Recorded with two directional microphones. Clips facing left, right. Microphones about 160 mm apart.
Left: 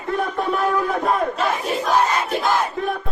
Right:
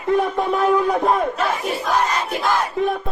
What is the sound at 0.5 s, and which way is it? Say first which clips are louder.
Speech: right 5 dB; 20° right (ahead or behind).